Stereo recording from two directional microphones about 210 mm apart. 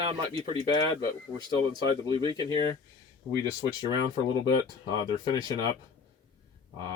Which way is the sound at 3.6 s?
20° right (ahead or behind).